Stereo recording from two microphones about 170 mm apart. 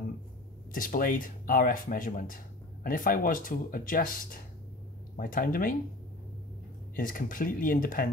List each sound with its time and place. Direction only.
0.7 s speech: 55° left (ahead or behind)
7.0 s speech: 55° left (ahead or behind)